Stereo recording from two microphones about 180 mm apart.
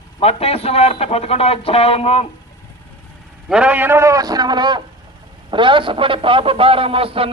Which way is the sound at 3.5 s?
5° right (ahead or behind).